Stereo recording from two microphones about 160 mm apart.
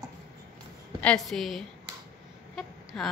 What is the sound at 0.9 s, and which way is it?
Speech, 5° left (ahead or behind).